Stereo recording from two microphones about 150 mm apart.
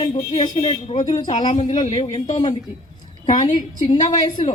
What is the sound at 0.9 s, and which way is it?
Speech, 50° left (ahead or behind).